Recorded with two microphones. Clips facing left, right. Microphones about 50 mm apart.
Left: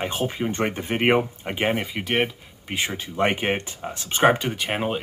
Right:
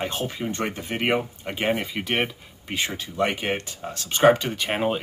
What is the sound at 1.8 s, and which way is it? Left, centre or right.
Speech, centre.